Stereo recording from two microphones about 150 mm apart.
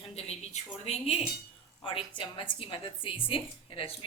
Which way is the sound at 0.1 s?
45° left (ahead or behind).